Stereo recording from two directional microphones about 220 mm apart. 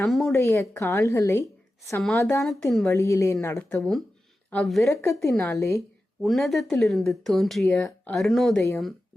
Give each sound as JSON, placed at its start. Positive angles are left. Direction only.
{"t": 0.0, "sound": "speech", "side_deg": 0}
{"t": 0.3, "sound": "a woman's voice", "side_deg": 10}
{"t": 2.4, "sound": "speech", "side_deg": 0}
{"t": 2.8, "sound": "a woman's voice", "side_deg": 15}
{"t": 3.8, "sound": "speech", "side_deg": 0}